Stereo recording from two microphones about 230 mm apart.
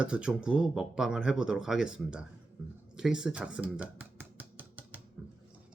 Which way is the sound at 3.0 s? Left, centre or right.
Centre.